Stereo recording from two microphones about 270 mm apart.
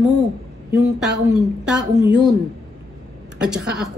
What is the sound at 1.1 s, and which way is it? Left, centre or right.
Speech, centre.